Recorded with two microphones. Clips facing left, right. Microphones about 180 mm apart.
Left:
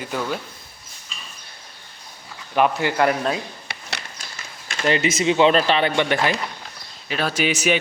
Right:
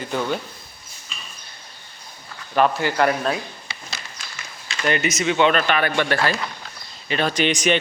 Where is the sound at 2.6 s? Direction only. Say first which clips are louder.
Even; 15° left (ahead or behind).